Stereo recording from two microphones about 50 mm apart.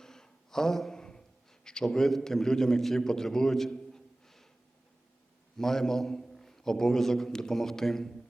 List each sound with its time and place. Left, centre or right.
0.0 s gasp: centre
1.6 s a man's voice: centre
3.7 s a sound: centre
5.5 s a man's voice: centre